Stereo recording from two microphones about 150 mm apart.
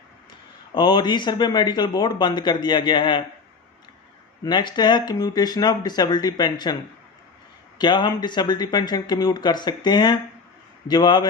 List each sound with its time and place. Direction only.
0.7 s speech: 30° left (ahead or behind)
4.4 s speech: 30° left (ahead or behind)
7.8 s speech: 30° left (ahead or behind)